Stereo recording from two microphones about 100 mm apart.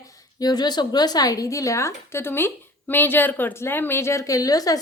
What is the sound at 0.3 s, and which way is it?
A woman's voice, 40° left (ahead or behind).